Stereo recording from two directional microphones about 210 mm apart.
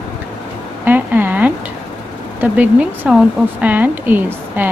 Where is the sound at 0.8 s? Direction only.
10° right (ahead or behind).